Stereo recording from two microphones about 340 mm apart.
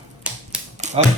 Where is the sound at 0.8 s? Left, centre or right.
Centre.